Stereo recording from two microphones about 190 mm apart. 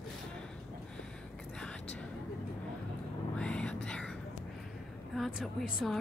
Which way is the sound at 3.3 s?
5° left (ahead or behind).